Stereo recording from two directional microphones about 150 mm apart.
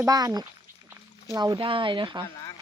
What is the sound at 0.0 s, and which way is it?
Speech, 25° right (ahead or behind).